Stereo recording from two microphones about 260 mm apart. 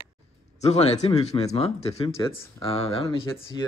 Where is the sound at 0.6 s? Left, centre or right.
Left.